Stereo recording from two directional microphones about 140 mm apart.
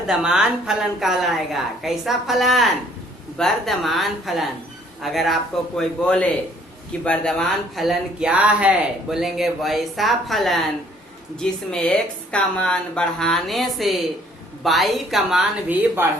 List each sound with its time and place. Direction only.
0.1 s speech: 5° right (ahead or behind)
16.0 s speech: 15° right (ahead or behind)